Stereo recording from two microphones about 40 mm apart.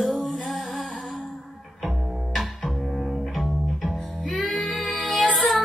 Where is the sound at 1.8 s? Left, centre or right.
Centre.